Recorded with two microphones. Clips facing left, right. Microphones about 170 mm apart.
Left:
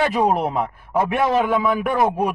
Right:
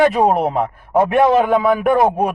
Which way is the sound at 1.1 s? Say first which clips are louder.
Right 5 dB; 50° right (ahead or behind).